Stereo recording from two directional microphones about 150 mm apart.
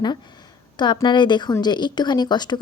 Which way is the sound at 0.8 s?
30° left (ahead or behind).